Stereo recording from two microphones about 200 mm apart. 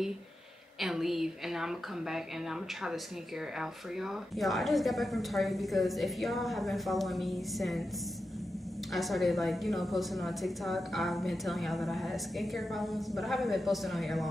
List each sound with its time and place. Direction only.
0.7 s a woman's voice: centre (ahead or behind)
3.5 s a woman's voice: centre (ahead or behind)
8.9 s a woman's voice: centre (ahead or behind)